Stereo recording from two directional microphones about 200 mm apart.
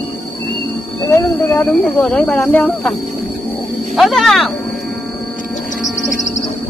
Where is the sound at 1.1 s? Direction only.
15° left (ahead or behind).